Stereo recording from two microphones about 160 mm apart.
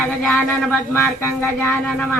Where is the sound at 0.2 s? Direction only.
5° left (ahead or behind).